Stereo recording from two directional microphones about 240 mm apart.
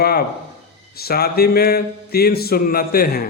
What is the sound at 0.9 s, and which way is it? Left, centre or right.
A man's voice, left.